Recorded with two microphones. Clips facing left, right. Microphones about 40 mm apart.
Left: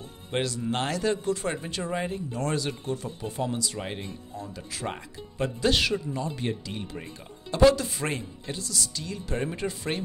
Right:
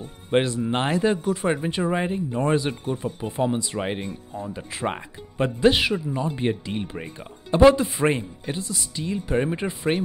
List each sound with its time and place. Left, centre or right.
0.3 s speech: right